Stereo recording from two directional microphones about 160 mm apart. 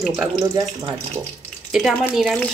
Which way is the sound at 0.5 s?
25° right (ahead or behind).